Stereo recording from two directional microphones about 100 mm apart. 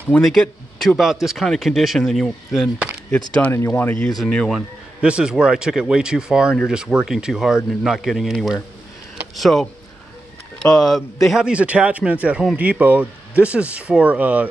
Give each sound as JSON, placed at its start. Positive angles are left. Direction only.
{"t": 0.2, "sound": "a man's voice", "side_deg": 0}
{"t": 3.4, "sound": "speech", "side_deg": 15}
{"t": 4.5, "sound": "speech", "side_deg": -10}